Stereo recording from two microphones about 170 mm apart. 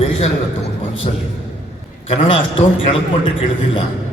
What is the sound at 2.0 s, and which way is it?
Speech, 35° left (ahead or behind).